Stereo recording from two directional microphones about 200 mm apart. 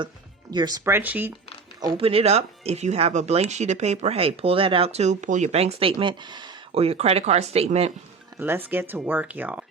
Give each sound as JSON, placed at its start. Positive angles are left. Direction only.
{"t": 0.5, "sound": "speech", "side_deg": -20}
{"t": 2.0, "sound": "speech", "side_deg": -30}
{"t": 8.4, "sound": "speech", "side_deg": -10}